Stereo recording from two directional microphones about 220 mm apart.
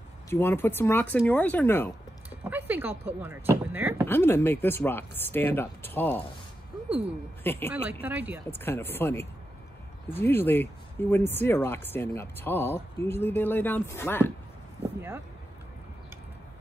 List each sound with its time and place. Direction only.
0.3 s speech: 10° left (ahead or behind)
2.5 s a sound: 10° right (ahead or behind)
3.2 s speech: 10° right (ahead or behind)
4.1 s speech: 10° left (ahead or behind)
7.4 s speech: 10° left (ahead or behind)
7.7 s speech: 5° right (ahead or behind)
8.5 s speech: 10° left (ahead or behind)
15.0 s a sound: 10° right (ahead or behind)